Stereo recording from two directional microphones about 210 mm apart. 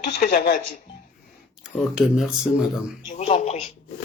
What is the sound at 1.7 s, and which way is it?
Speech, centre (ahead or behind).